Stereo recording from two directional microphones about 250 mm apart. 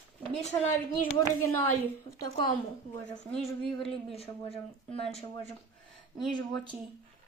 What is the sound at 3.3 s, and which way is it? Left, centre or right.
Speech, centre.